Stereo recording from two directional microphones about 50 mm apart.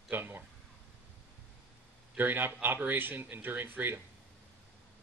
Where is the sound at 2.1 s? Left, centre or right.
Right.